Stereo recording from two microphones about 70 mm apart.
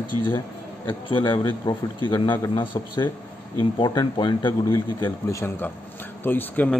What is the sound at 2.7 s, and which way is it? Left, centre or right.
Speech, left.